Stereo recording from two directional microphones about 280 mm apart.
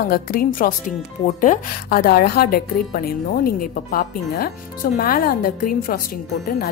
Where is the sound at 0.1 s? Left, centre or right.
Left.